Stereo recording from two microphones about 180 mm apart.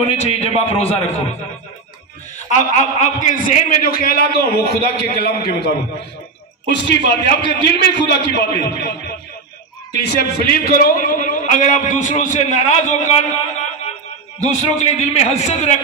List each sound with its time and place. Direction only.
0.0 s a man's voice: 35° left (ahead or behind)
2.3 s a man's voice: 45° left (ahead or behind); by 5.8 s 60° left (ahead or behind)
6.7 s a man's voice: 75° left (ahead or behind)
10.1 s a man's voice: 55° left (ahead or behind); by 15.8 s 40° left (ahead or behind)